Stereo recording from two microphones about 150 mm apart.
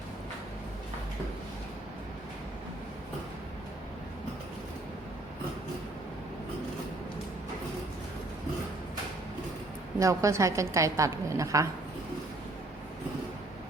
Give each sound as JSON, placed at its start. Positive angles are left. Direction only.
{"t": 10.0, "sound": "a woman's voice", "side_deg": -20}